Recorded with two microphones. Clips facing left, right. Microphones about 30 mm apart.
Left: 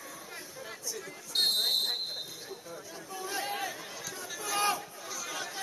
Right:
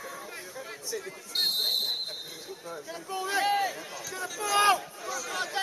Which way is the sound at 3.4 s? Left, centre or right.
Right.